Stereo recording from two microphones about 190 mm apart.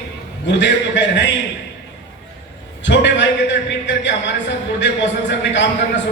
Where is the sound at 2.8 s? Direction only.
70° left (ahead or behind).